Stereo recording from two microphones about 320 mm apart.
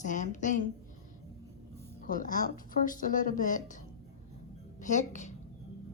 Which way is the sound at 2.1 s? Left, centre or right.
Left.